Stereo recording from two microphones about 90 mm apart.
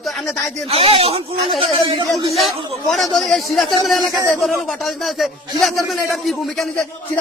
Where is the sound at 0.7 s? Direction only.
90° right.